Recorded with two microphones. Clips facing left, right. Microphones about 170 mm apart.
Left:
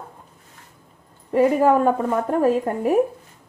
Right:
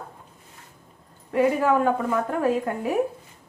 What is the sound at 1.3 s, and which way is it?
A woman's voice, 40° left (ahead or behind).